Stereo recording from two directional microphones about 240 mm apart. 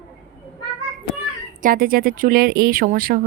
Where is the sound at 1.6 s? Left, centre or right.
Right.